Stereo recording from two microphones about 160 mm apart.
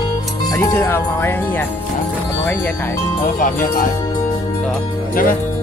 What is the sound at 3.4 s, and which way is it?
Speech, 55° left (ahead or behind).